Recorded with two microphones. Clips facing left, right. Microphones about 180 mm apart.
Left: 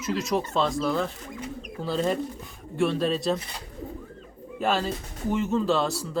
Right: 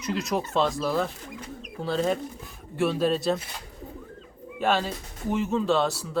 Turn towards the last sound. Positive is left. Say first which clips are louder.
# even
turn(degrees=0)  # may be behind; listen again after turning